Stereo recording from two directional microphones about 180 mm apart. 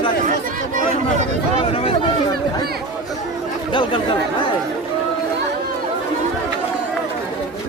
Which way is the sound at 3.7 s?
25° left (ahead or behind).